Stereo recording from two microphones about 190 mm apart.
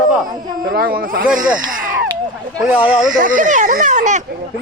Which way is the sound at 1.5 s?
45° right (ahead or behind).